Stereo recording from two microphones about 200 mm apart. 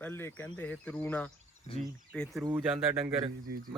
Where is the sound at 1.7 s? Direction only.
30° left (ahead or behind).